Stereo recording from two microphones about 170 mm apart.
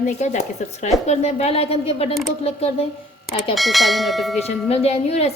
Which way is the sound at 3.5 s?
Centre (ahead or behind).